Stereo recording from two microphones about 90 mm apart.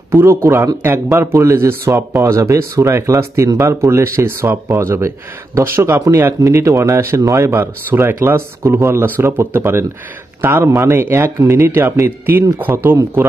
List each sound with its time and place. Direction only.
0.1 s a man's voice: 30° right (ahead or behind)